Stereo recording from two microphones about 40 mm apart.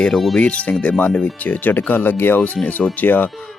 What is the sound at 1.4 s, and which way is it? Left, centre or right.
Speech, left.